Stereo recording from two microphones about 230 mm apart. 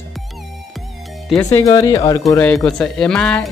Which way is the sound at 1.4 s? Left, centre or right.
Centre.